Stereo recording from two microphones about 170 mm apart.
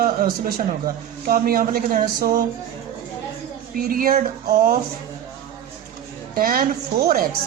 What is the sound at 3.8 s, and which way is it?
Speech, 60° right (ahead or behind).